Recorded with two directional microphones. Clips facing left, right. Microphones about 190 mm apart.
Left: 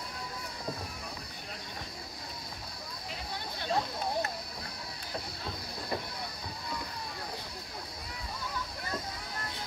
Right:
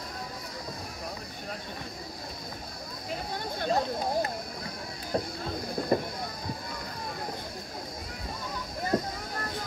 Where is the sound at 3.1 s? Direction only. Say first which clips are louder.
Right 7 dB; 45° right (ahead or behind).